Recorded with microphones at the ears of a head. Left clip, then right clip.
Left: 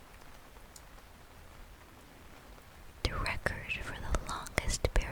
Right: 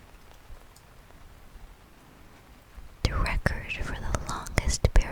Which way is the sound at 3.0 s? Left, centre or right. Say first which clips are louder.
Right 5 dB; right.